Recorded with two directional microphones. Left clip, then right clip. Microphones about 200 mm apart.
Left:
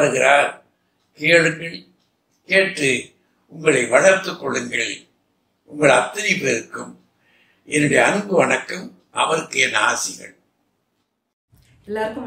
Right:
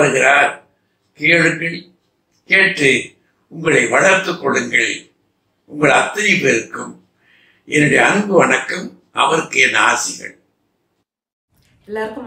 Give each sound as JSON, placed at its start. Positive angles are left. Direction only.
{"t": 0.0, "sound": "a man's voice", "side_deg": 40}
{"t": 7.6, "sound": "speech", "side_deg": 45}
{"t": 11.8, "sound": "a woman's voice", "side_deg": -5}